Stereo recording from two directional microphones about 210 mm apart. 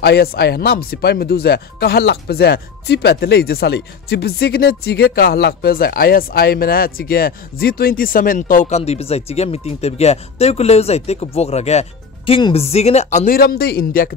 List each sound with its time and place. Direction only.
0.0 s speech: 50° left (ahead or behind)